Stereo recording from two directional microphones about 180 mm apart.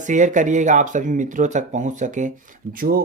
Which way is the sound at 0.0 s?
45° right (ahead or behind).